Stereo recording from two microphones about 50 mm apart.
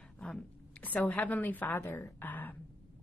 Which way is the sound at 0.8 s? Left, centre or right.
Left.